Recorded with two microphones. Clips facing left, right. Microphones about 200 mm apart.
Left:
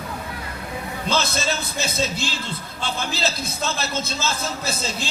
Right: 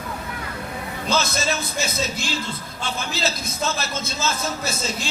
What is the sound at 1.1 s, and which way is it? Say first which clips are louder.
A man's voice: right 1 dB; 30° left (ahead or behind).